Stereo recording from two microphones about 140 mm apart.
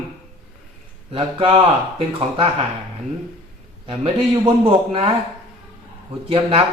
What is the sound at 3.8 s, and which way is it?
Speech, 40° right (ahead or behind).